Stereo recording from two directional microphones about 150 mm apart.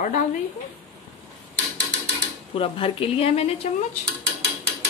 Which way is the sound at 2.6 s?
40° left (ahead or behind).